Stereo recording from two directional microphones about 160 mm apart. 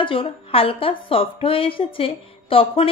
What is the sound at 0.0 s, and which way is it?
A woman's voice, 35° left (ahead or behind).